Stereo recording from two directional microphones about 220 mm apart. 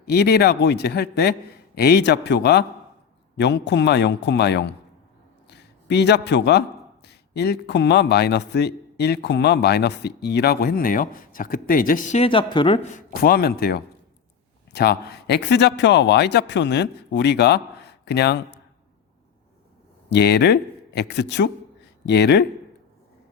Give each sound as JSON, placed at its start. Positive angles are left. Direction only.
{"t": 0.0, "sound": "a man's voice", "side_deg": 50}
{"t": 12.2, "sound": "speech", "side_deg": 25}
{"t": 13.2, "sound": "a man's voice", "side_deg": 45}
{"t": 20.1, "sound": "speech", "side_deg": 50}